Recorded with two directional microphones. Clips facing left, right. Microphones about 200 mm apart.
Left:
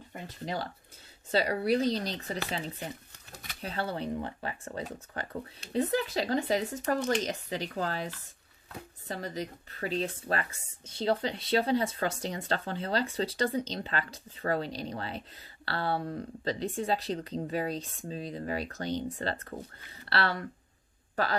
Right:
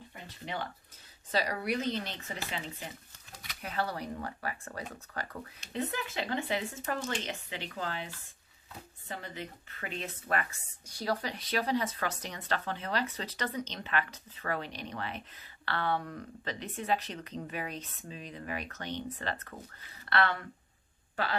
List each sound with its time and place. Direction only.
0.1 s speech: 40° left (ahead or behind)
1.3 s speech: 30° left (ahead or behind)
3.6 s speech: 25° left (ahead or behind)